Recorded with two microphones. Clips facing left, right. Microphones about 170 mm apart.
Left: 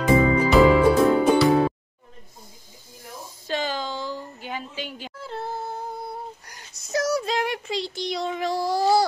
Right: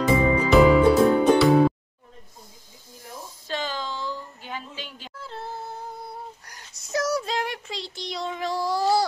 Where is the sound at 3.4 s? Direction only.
10° left (ahead or behind).